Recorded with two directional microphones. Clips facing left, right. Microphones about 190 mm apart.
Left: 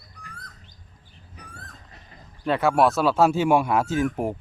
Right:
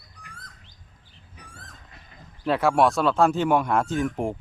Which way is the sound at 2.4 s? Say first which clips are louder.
Even; centre (ahead or behind).